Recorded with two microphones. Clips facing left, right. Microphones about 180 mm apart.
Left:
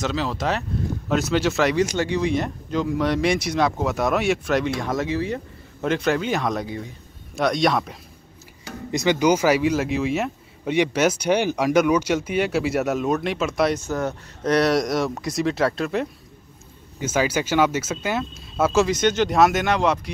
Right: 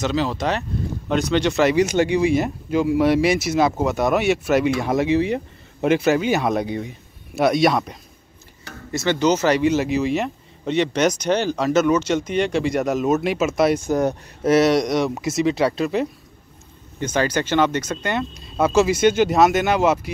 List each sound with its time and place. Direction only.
0.0 s speech: centre (ahead or behind)
2.0 s speech: 10° right (ahead or behind)
6.5 s speech: 20° right (ahead or behind)
7.3 s speech: 5° right (ahead or behind)
8.9 s speech: 15° left (ahead or behind); by 14.5 s 15° right (ahead or behind)
14.5 s speech: centre (ahead or behind)